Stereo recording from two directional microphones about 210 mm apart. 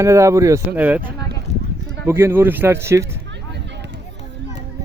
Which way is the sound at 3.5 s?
55° right (ahead or behind).